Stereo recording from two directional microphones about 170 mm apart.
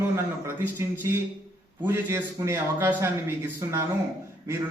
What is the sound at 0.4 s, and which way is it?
A man's voice, 15° right (ahead or behind).